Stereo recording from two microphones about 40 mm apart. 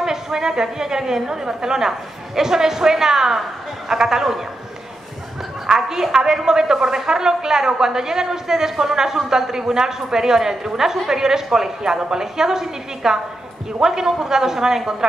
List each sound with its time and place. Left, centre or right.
0.0 s a woman's voice: centre
5.7 s a woman's voice: centre